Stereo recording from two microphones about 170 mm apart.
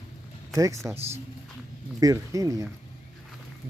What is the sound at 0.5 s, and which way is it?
Speech, 20° right (ahead or behind).